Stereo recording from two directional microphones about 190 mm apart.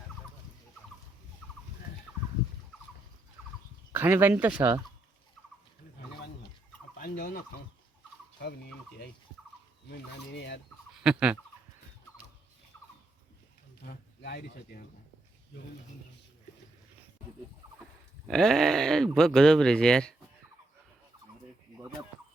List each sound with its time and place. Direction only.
3.9 s speech: 10° right (ahead or behind)
7.0 s turkey: 50° left (ahead or behind)
8.4 s fowl: 60° left (ahead or behind)
10.3 s turkey: 65° left (ahead or behind)
11.0 s speech: 5° right (ahead or behind)
13.8 s speech: 60° left (ahead or behind)
18.3 s speech: centre (ahead or behind)